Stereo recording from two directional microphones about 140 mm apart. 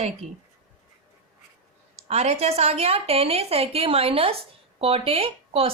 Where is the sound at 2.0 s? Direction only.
50° right (ahead or behind).